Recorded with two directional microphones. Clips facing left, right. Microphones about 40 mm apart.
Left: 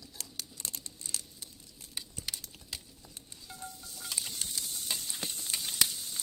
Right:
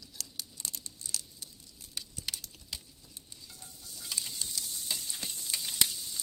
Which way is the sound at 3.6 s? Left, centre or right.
Left.